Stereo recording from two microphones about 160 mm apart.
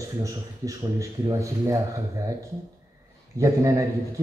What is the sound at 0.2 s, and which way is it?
Speech, 20° right (ahead or behind).